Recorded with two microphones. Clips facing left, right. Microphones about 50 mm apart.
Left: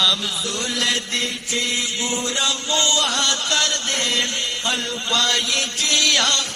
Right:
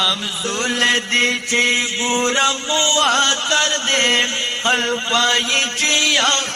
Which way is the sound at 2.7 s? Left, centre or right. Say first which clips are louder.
Right 2 dB; right.